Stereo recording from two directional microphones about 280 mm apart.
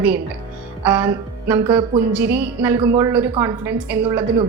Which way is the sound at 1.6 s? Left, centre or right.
Centre.